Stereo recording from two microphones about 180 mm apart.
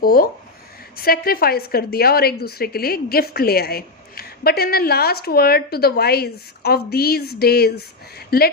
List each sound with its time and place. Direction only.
0.0 s a woman's voice: 55° left (ahead or behind)